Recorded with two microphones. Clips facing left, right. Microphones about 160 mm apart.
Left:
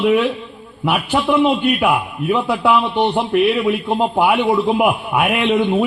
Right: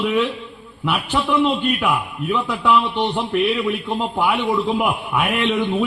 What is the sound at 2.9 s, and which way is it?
Speech, 35° left (ahead or behind).